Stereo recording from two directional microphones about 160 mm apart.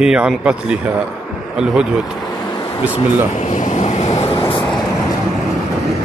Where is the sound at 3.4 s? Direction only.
50° left (ahead or behind).